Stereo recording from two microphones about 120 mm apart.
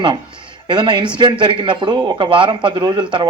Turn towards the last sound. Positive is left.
turn(degrees=-40)  # may be behind; listen again after turning